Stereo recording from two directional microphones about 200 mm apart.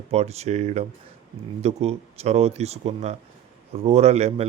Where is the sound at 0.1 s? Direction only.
30° right (ahead or behind).